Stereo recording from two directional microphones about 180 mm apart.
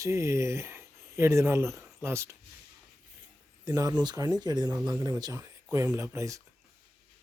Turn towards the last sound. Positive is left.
turn(degrees=-15)  # may be behind; listen again after turning